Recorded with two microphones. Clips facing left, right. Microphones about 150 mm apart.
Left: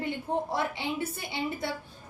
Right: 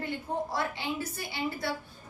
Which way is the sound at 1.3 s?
20° left (ahead or behind).